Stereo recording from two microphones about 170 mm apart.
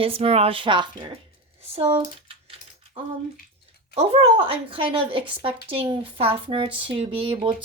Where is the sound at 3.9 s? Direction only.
35° right (ahead or behind).